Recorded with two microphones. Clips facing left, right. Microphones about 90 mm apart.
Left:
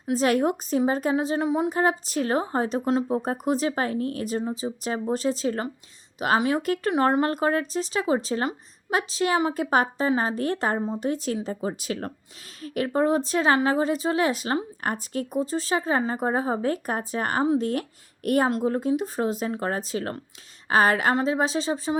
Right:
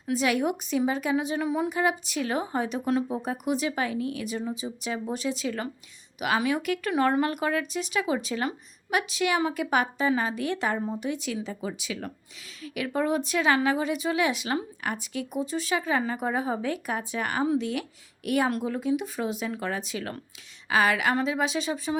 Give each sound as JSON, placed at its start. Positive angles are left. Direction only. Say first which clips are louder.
{"t": 0.1, "sound": "a woman's voice", "louder": "left 3 dB", "side_deg": 40}
{"t": 1.7, "sound": "a woman's voice", "louder": "left 3 dB", "side_deg": 35}